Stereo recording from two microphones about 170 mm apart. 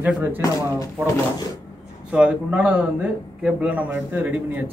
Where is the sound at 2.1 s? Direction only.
5° right (ahead or behind).